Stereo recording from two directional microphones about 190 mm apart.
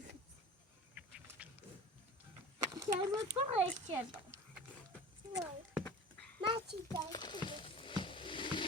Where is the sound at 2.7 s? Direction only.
20° right (ahead or behind).